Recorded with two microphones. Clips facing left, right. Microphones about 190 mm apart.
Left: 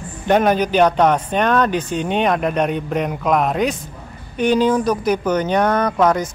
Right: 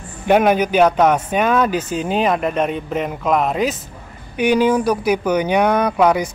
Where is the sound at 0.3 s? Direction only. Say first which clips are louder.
Right 1 dB; 10° right (ahead or behind).